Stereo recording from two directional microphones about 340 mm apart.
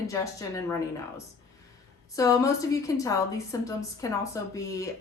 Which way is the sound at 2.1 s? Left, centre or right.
Centre.